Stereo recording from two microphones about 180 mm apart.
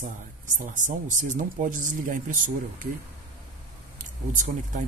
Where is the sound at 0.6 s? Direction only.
45° right (ahead or behind).